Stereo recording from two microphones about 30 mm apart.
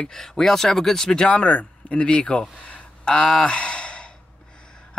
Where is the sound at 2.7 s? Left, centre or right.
Left.